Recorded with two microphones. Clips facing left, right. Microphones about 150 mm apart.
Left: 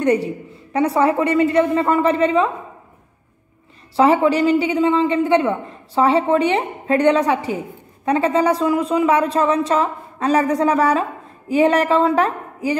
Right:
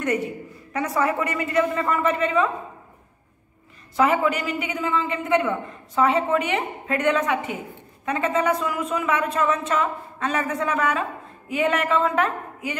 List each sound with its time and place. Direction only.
0.0 s a woman's voice: 30° left (ahead or behind)
3.9 s a man's voice: 30° left (ahead or behind)